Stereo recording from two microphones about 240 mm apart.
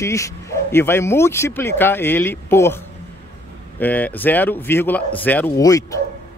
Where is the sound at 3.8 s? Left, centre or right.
Centre.